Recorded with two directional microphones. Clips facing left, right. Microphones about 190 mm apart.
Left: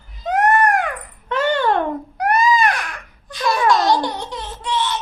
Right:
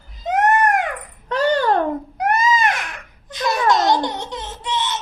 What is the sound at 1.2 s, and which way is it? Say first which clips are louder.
Babbling: right 1 dB; 40° right (ahead or behind).